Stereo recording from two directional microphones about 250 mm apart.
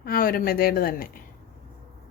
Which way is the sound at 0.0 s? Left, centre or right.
Left.